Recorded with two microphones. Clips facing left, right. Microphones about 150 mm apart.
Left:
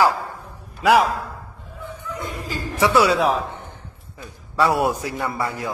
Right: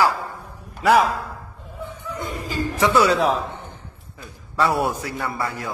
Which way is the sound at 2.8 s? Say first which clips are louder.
Left 1 dB; 10° left (ahead or behind).